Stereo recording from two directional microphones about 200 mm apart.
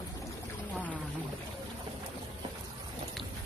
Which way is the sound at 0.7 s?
10° left (ahead or behind).